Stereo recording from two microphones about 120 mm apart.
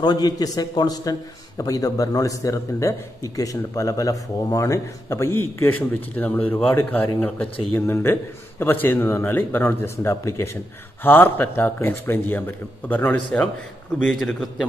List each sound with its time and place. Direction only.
0.0 s a man's voice: 35° left (ahead or behind); by 14.7 s 5° left (ahead or behind)